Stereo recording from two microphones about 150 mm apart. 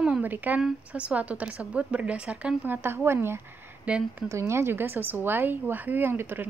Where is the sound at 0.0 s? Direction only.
10° right (ahead or behind).